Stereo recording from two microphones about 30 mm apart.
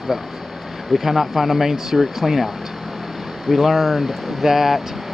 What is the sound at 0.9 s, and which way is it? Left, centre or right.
Speech, centre.